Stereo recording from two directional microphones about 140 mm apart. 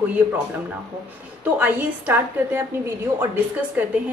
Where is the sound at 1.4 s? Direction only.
15° right (ahead or behind).